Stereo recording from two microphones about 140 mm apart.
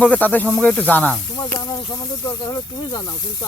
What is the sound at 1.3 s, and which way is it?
Speech, 25° left (ahead or behind).